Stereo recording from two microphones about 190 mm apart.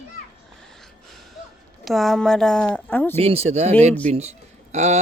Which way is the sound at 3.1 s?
30° right (ahead or behind).